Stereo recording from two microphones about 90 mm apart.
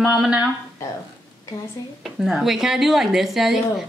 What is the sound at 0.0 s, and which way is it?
Speech, 5° right (ahead or behind).